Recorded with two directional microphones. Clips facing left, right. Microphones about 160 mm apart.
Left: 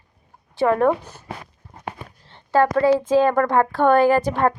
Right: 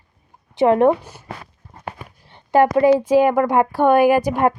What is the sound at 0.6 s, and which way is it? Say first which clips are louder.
Speech: right 4 dB; 20° right (ahead or behind).